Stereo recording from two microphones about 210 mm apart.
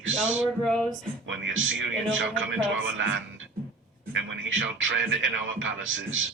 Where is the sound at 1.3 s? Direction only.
65° right (ahead or behind).